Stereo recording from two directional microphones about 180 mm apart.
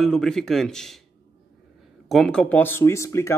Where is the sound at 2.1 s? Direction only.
Centre (ahead or behind).